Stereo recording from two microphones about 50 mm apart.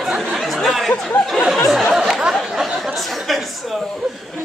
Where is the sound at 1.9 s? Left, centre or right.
Centre.